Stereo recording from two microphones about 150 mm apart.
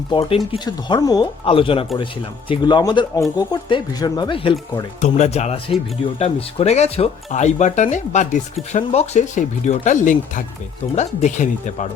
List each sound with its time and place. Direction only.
0.1 s speech: 35° left (ahead or behind)
1.5 s speech: 35° left (ahead or behind)
4.9 s speech: 50° left (ahead or behind)